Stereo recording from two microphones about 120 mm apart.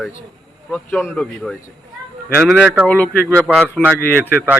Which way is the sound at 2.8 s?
15° left (ahead or behind).